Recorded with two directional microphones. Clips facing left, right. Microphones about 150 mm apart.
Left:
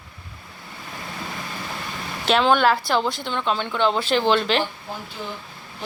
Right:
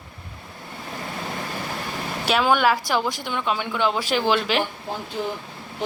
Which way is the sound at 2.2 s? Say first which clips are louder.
Left 2 dB; 10° right (ahead or behind).